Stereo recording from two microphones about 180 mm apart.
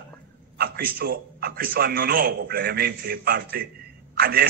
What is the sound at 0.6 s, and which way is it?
A man's voice, 55° right (ahead or behind).